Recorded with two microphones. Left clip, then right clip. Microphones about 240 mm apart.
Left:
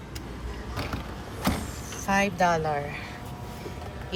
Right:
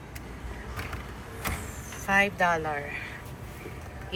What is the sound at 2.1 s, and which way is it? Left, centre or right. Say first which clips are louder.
Speech: even; centre.